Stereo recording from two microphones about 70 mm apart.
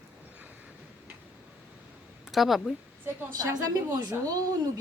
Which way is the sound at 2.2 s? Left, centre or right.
Centre.